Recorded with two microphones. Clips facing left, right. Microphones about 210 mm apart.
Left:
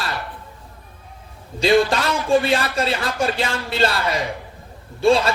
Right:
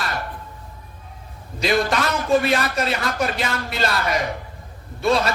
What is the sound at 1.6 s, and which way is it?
A woman's voice, 30° left (ahead or behind).